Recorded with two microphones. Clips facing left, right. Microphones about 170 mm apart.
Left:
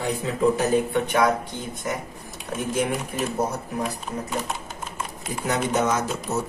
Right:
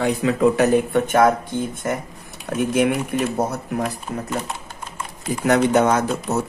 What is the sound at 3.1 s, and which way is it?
Speech, 60° right (ahead or behind).